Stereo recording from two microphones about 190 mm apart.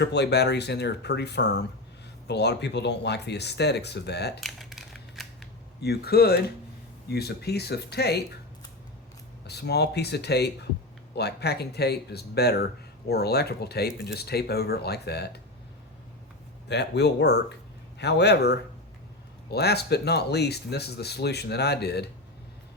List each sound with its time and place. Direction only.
0.0 s speech: 60° left (ahead or behind)
4.4 s a sound: centre (ahead or behind)
5.8 s speech: 55° left (ahead or behind)
9.5 s speech: 60° left (ahead or behind)
16.6 s speech: 60° left (ahead or behind)